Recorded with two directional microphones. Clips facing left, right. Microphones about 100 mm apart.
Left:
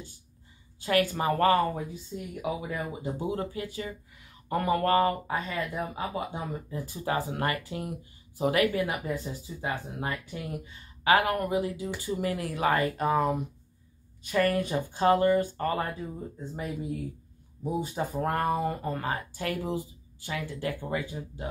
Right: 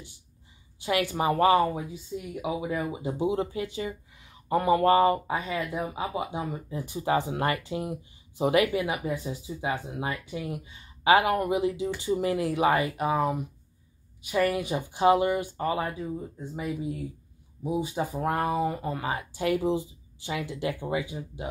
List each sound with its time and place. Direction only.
0.7 s speech: 20° right (ahead or behind)
2.1 s speech: 10° left (ahead or behind)
2.4 s speech: 15° right (ahead or behind)
10.6 s speech: 20° right (ahead or behind)